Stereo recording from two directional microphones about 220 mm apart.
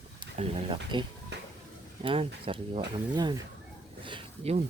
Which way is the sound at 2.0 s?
25° right (ahead or behind).